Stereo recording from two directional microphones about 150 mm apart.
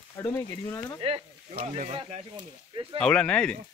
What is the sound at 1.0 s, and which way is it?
Speech, 40° right (ahead or behind).